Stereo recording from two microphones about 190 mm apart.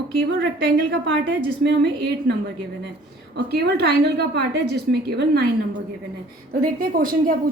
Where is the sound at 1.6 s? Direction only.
65° right (ahead or behind).